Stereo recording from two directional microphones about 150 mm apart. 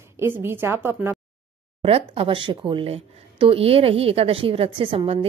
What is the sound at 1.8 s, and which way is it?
Speech, 40° right (ahead or behind).